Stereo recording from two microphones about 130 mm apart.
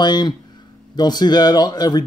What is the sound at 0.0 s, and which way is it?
Speech, 35° left (ahead or behind).